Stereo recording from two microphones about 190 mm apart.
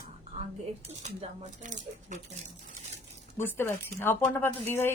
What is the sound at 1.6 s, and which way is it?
Speech, 40° right (ahead or behind).